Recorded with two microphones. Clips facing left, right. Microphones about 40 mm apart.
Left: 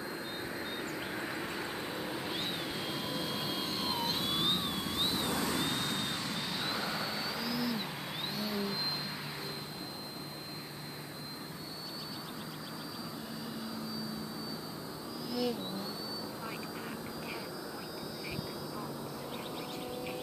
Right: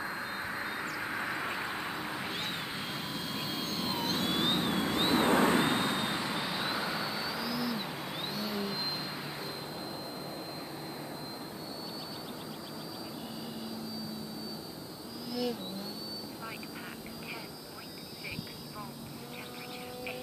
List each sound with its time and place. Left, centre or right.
0.6 s vehicle: centre
2.9 s vehicle: centre
4.7 s vehicle: right; by 8.7 s centre